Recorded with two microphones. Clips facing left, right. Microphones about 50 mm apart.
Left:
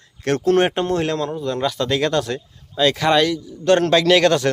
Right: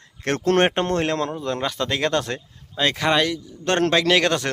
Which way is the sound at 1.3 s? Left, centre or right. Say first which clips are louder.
Left 3 dB; right.